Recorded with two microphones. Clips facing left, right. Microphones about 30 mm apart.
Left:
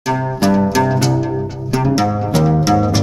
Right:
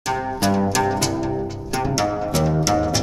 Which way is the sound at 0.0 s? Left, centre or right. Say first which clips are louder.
Left 5 dB; centre.